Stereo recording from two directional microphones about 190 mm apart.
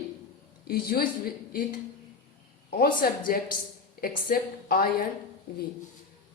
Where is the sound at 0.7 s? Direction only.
50° left (ahead or behind).